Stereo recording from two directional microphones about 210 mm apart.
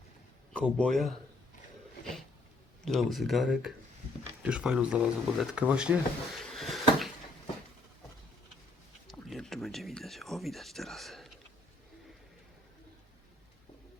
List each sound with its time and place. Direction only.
0.5 s speech: 5° left (ahead or behind)
2.8 s speech: centre (ahead or behind)
9.0 s speech: centre (ahead or behind)